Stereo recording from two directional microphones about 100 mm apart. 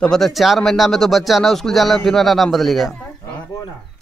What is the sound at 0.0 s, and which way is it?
Speech, 5° left (ahead or behind).